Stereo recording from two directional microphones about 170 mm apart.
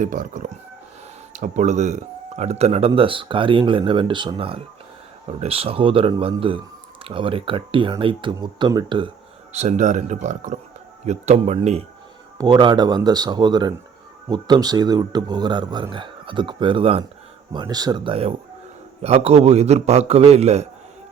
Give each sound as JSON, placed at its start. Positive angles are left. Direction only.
{"t": 0.0, "sound": "speech", "side_deg": -50}
{"t": 9.5, "sound": "speech", "side_deg": -40}
{"t": 12.4, "sound": "speech", "side_deg": -25}